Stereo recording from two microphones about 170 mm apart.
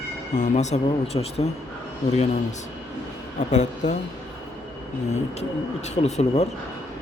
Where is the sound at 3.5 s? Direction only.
45° left (ahead or behind).